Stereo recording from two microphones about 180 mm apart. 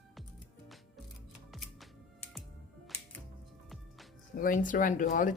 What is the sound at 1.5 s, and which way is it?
Music, centre (ahead or behind).